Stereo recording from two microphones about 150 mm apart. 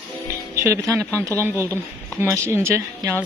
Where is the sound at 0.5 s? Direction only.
20° right (ahead or behind).